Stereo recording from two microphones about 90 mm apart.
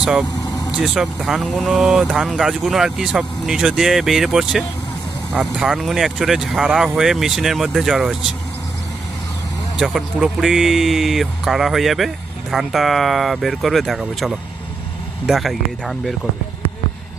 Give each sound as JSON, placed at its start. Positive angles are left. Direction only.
{"t": 0.0, "sound": "speech", "side_deg": -5}
{"t": 0.3, "sound": "vehicle", "side_deg": 45}
{"t": 0.8, "sound": "speech", "side_deg": -5}
{"t": 9.7, "sound": "speech", "side_deg": -5}